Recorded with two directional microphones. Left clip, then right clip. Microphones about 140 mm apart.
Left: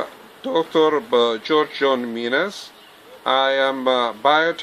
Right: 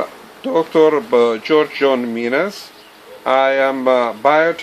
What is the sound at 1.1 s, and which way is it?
Speech, 15° left (ahead or behind).